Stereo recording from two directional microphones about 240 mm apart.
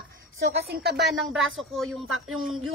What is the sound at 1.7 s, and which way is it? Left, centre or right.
Speech, centre.